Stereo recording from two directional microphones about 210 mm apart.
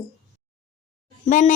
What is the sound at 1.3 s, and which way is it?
Speech, 40° left (ahead or behind).